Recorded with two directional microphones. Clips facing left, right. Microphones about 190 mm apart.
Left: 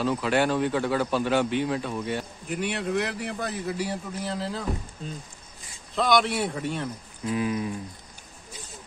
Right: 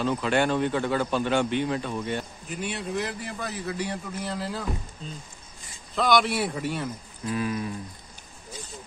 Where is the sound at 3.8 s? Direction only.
5° left (ahead or behind).